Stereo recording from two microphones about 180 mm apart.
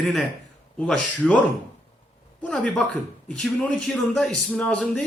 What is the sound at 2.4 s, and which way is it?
Speech, 5° left (ahead or behind).